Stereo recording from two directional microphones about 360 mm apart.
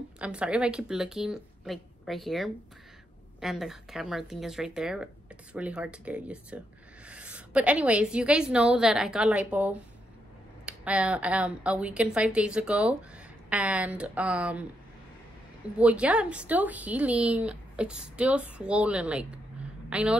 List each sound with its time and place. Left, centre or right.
0.2 s speech: centre
15.8 s a woman's voice: centre